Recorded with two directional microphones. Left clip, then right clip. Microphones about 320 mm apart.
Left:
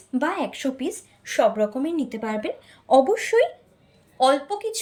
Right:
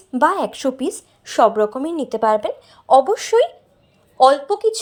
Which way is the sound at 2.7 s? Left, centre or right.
Right.